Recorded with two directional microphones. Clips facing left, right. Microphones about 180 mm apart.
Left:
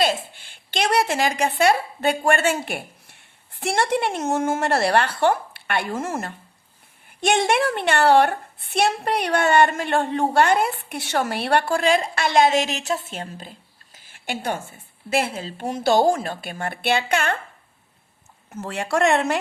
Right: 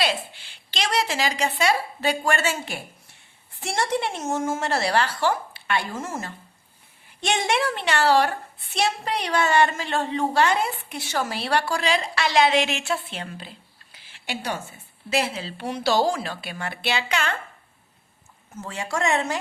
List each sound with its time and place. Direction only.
0.0 s a woman's voice: 50° left (ahead or behind)
18.5 s a woman's voice: 65° left (ahead or behind)